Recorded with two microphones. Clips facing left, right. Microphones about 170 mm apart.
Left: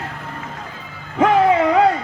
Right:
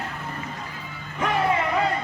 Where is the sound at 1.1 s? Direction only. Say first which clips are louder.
Left 9 dB; 90° left.